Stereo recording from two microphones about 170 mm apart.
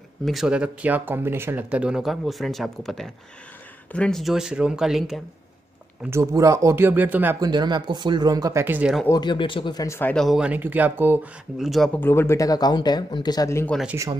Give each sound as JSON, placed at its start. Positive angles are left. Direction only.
{"t": 0.2, "sound": "speech", "side_deg": 0}
{"t": 6.0, "sound": "speech", "side_deg": -15}
{"t": 7.3, "sound": "speech", "side_deg": -25}
{"t": 9.0, "sound": "speech", "side_deg": 25}
{"t": 11.5, "sound": "speech", "side_deg": 0}